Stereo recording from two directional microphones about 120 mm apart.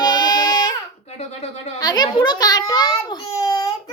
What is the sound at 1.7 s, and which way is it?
A child's voice, 35° left (ahead or behind).